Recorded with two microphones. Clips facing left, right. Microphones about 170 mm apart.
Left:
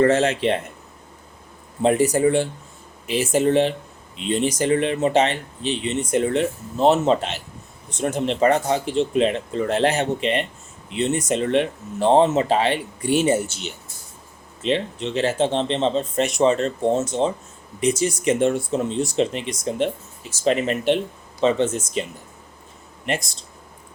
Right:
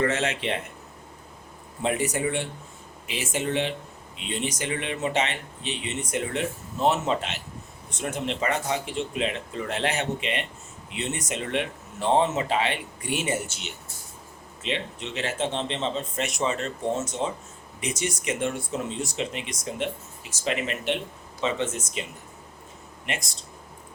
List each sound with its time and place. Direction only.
0.0 s speech: 35° left (ahead or behind)
1.8 s speech: 35° left (ahead or behind)